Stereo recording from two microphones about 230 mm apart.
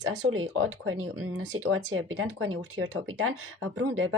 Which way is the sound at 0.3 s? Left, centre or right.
Right.